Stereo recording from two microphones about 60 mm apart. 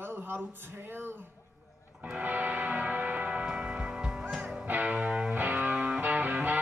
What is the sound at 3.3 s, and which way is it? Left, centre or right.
Church bell, centre.